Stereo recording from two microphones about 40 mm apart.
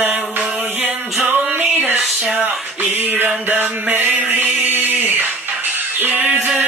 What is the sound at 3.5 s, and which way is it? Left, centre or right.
Music, right.